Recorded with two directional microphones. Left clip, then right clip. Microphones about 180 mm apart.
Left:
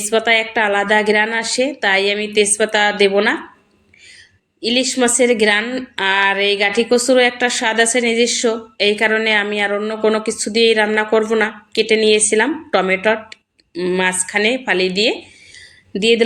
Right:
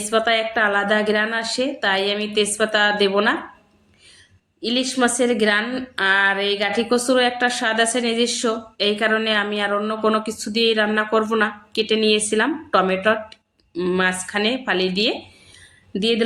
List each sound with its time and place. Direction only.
0.1 s a woman's voice: 10° left (ahead or behind)
4.6 s a woman's voice: 10° left (ahead or behind)
15.5 s a sound: 5° left (ahead or behind)